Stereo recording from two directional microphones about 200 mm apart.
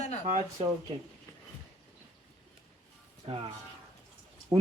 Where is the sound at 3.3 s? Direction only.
30° right (ahead or behind).